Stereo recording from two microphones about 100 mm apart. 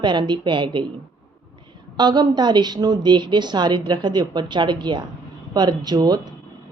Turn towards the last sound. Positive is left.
turn(degrees=-40)  # may be behind; listen again after turning